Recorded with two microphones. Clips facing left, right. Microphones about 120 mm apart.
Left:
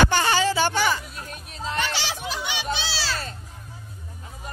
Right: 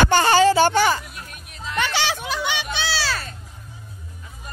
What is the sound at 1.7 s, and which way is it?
Music, 65° right (ahead or behind).